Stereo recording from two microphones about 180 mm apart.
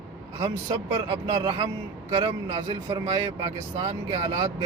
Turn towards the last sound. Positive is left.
turn(degrees=-30)  # may be behind; listen again after turning